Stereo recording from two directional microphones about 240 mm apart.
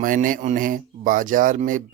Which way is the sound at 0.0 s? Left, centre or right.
Right.